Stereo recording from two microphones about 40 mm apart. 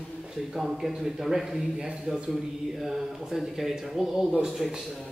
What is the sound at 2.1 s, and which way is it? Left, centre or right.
Speech, centre.